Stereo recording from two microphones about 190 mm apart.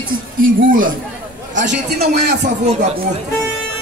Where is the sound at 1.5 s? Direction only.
65° right (ahead or behind).